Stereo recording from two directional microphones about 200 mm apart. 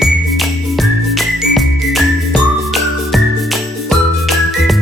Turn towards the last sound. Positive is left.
turn(degrees=0)  # may be behind; listen again after turning